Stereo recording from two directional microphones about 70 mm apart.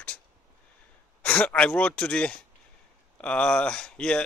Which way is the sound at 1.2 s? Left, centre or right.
Left.